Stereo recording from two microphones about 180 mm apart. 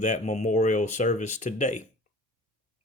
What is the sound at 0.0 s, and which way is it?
Speech, 40° left (ahead or behind).